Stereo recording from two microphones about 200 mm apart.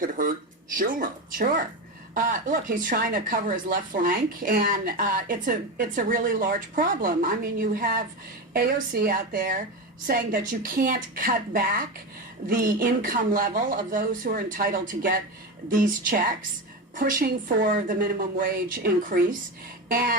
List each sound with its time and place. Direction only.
0.0 s speech: 40° right (ahead or behind)